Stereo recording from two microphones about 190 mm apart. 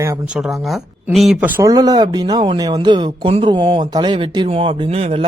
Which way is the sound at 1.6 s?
20° right (ahead or behind).